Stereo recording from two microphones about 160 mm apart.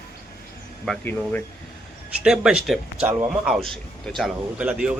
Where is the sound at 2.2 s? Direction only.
5° right (ahead or behind).